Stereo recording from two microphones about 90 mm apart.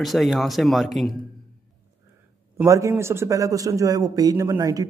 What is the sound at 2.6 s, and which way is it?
A man's voice, 35° right (ahead or behind).